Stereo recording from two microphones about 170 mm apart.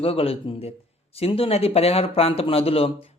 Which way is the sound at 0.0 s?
35° left (ahead or behind).